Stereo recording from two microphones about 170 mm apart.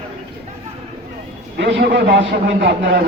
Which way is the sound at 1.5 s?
90° right.